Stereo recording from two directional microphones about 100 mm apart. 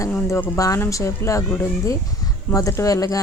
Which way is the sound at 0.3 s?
25° left (ahead or behind).